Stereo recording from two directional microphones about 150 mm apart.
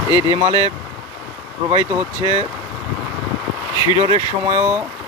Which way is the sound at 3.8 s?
30° left (ahead or behind).